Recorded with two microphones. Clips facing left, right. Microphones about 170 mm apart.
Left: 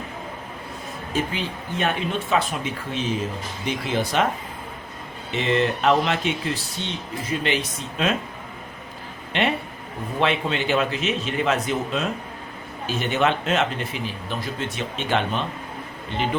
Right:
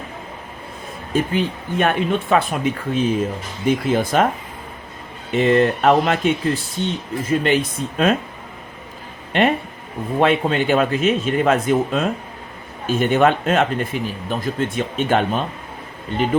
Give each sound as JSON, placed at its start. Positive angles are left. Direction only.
{"t": 1.1, "sound": "speech", "side_deg": -50}
{"t": 5.3, "sound": "speech", "side_deg": -50}
{"t": 9.3, "sound": "speech", "side_deg": -50}